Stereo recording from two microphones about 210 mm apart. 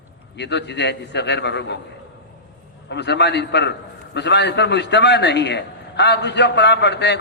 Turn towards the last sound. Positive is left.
turn(degrees=55)  # may be behind; listen again after turning